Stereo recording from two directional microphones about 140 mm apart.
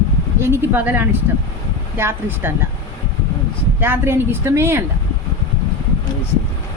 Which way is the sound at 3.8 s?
15° right (ahead or behind).